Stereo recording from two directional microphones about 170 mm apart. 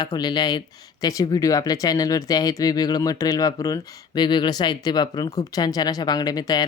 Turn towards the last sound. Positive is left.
turn(degrees=20)  # may be behind; listen again after turning